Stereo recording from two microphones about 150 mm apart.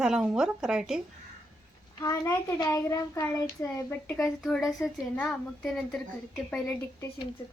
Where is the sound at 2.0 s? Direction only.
20° left (ahead or behind).